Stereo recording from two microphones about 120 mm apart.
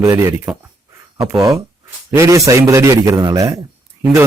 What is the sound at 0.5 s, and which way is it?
Speech, 5° right (ahead or behind).